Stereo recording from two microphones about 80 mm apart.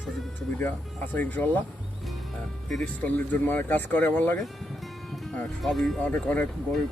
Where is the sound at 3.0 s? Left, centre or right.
Left.